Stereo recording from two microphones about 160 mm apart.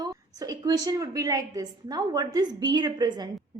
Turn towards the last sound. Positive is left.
turn(degrees=-25)  # may be behind; listen again after turning